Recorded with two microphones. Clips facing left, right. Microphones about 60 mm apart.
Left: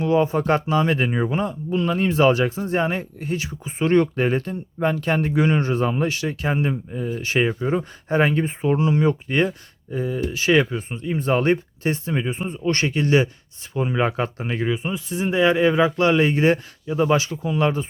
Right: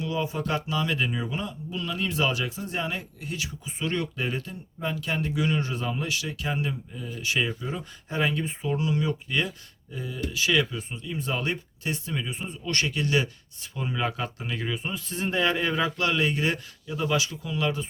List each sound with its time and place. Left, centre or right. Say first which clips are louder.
0.0 s speech: left 10 dB; left
14.7 s a man's voice: left 7 dB; centre